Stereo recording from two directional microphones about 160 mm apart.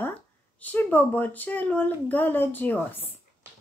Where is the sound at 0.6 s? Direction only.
10° left (ahead or behind).